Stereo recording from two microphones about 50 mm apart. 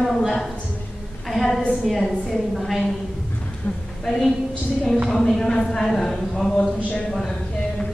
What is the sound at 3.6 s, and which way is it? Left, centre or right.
Speech, left.